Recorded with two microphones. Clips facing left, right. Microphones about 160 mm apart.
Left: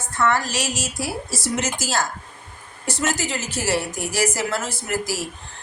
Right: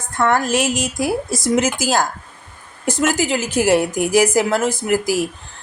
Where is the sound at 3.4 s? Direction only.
10° right (ahead or behind).